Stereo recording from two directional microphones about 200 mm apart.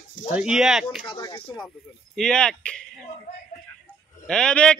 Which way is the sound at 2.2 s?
5° left (ahead or behind).